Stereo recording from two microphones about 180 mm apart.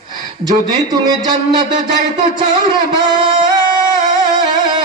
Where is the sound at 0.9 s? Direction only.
20° right (ahead or behind).